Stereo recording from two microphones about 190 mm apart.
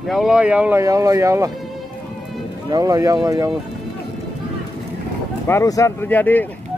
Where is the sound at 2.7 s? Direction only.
20° right (ahead or behind).